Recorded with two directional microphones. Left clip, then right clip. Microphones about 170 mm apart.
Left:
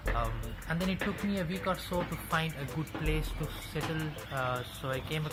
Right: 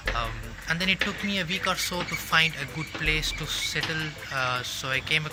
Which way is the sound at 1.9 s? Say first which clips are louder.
Right 8 dB; 5° right (ahead or behind).